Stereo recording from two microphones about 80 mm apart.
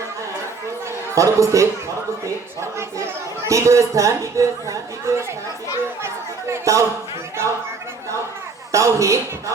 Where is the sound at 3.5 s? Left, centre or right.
Right.